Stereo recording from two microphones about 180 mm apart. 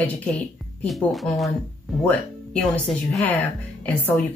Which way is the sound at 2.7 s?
Centre (ahead or behind).